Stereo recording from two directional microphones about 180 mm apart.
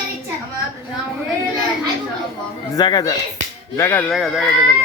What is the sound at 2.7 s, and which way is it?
A man's voice, 20° left (ahead or behind).